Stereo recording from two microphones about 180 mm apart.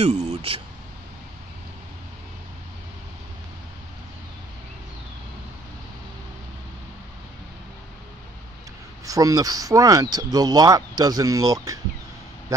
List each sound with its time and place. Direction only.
0.0 s speech: 40° right (ahead or behind)
9.0 s speech: 20° right (ahead or behind)